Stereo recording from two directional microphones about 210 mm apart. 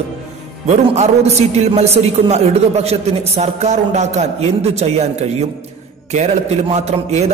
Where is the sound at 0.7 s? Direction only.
30° right (ahead or behind).